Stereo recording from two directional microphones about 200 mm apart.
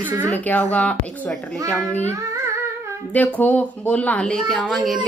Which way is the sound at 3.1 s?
10° left (ahead or behind).